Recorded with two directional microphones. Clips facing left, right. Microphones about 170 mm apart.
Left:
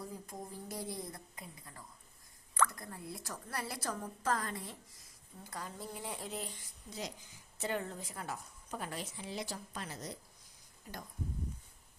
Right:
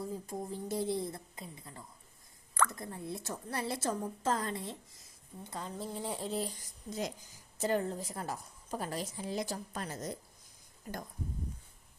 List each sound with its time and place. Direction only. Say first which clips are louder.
0.1 s a woman's voice: right 7 dB; 25° right (ahead or behind); by 10.2 s 45° right (ahead or behind)